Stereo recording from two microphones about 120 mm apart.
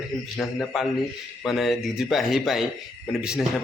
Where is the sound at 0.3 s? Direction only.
Centre (ahead or behind).